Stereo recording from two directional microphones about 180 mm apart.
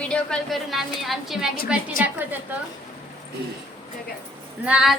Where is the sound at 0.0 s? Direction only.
5° left (ahead or behind).